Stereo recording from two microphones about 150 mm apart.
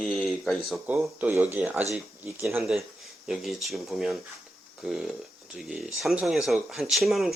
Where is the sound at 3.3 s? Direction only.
Centre (ahead or behind).